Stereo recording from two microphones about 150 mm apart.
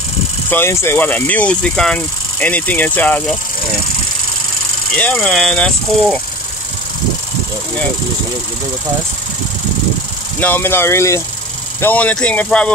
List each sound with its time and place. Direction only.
0.5 s speech: 15° left (ahead or behind)
4.9 s speech: 10° left (ahead or behind)
10.4 s speech: 15° left (ahead or behind)